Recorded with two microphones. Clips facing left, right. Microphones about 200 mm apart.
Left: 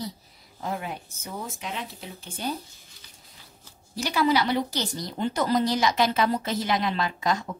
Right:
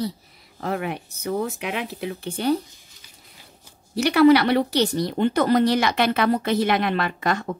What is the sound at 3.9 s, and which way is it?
Speech, 65° right (ahead or behind).